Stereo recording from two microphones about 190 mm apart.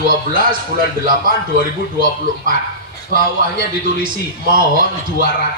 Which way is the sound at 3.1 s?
50° right (ahead or behind).